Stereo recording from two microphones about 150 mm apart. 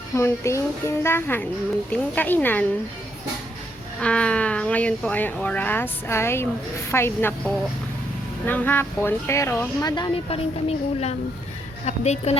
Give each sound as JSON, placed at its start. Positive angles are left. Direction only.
{"t": 0.1, "sound": "speech", "side_deg": 15}
{"t": 4.0, "sound": "speech", "side_deg": 5}
{"t": 9.8, "sound": "a woman's voice", "side_deg": 30}